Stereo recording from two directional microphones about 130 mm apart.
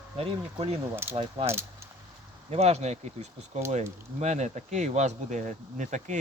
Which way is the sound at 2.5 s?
55° right (ahead or behind).